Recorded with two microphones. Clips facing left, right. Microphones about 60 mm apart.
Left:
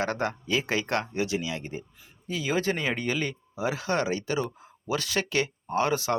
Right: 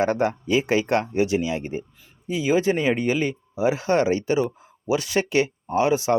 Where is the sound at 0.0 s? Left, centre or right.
Right.